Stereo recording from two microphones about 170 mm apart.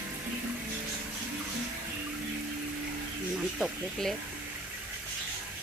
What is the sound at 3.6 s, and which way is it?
Speech, centre (ahead or behind).